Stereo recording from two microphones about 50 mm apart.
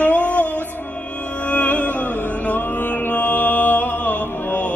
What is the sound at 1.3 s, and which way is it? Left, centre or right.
Music, left.